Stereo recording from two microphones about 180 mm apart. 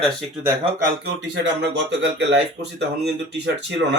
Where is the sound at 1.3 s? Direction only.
80° right.